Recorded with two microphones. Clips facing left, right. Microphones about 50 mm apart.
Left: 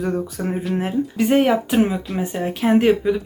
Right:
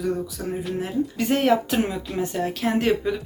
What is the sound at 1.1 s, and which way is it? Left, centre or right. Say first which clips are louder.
A woman's voice: left 4 dB; centre.